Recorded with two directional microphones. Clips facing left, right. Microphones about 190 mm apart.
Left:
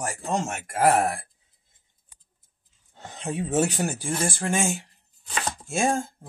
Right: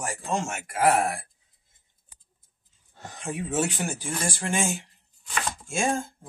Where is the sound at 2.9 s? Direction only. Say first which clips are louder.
Left 2 dB; 20° left (ahead or behind).